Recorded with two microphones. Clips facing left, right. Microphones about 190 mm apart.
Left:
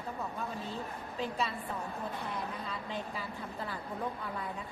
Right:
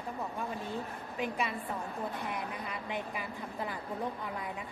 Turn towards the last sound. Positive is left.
turn(degrees=-15)  # may be behind; listen again after turning